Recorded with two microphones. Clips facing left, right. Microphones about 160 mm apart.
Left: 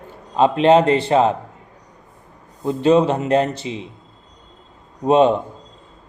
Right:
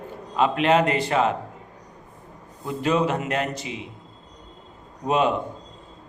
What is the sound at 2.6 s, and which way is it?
Speech, 30° left (ahead or behind).